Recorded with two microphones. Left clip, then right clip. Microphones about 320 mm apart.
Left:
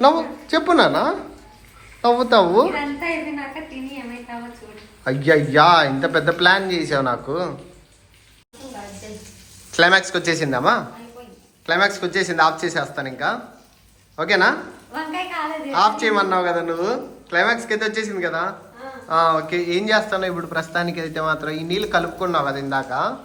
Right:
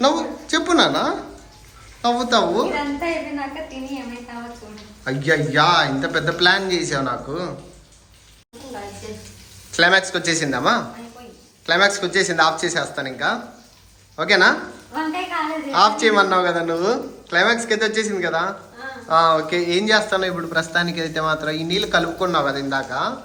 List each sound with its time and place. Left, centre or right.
0.0 s a sound: centre
0.5 s speech: centre
5.0 s speech: centre
9.7 s speech: centre
15.7 s speech: centre